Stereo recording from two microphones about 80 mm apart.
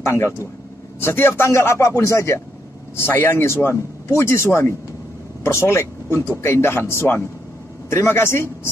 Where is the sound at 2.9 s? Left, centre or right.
Left.